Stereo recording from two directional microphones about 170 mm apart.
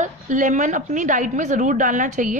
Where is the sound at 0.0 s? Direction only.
45° right (ahead or behind).